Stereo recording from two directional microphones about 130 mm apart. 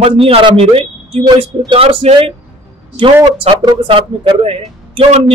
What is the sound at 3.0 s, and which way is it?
Speech, 30° right (ahead or behind).